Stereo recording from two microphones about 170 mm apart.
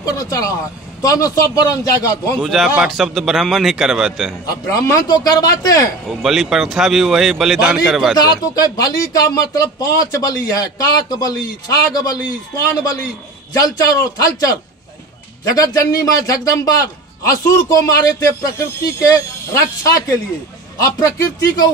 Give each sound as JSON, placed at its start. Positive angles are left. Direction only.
{"t": 0.0, "sound": "speech", "side_deg": 20}
{"t": 2.4, "sound": "a man's voice", "side_deg": 0}
{"t": 4.5, "sound": "speech", "side_deg": 20}
{"t": 6.0, "sound": "a man's voice", "side_deg": 0}
{"t": 8.2, "sound": "speech", "side_deg": 20}
{"t": 15.5, "sound": "speech", "side_deg": 20}